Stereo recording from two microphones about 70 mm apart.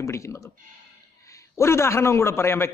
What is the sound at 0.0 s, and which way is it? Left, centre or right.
Speech, left.